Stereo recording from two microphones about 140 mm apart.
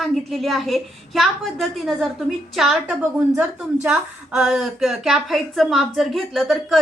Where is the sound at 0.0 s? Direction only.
Centre (ahead or behind).